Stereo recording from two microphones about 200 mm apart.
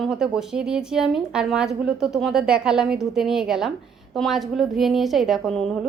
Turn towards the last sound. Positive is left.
turn(degrees=0)  # may be behind; listen again after turning